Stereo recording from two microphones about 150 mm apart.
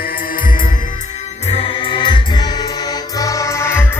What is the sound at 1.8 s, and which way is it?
Music, 35° left (ahead or behind).